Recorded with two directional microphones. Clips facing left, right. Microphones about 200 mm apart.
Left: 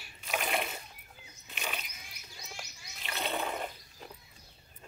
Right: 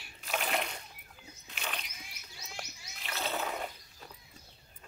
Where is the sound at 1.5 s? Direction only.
5° left (ahead or behind).